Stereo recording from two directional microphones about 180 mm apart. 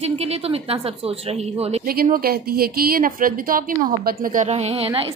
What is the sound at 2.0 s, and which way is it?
A woman's voice, 55° right (ahead or behind).